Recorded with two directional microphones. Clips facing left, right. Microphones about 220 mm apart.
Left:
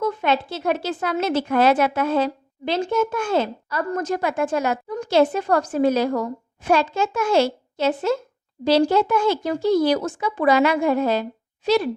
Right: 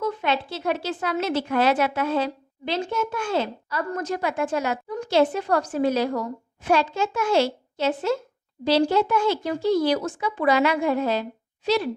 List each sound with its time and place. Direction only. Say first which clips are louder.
0.0 s speech: left 3 dB; 45° left (ahead or behind)